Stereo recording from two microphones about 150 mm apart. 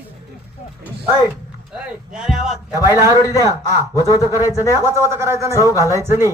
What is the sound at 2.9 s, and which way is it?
A man's voice, 20° right (ahead or behind).